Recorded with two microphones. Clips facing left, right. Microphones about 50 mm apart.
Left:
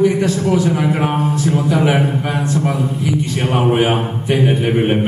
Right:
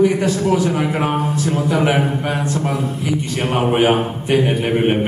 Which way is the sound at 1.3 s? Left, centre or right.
Centre.